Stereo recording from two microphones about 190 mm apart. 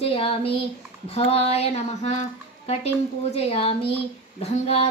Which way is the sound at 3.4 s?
30° left (ahead or behind).